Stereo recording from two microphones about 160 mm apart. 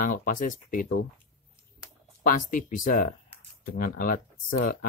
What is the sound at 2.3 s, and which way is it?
Speech, 55° left (ahead or behind).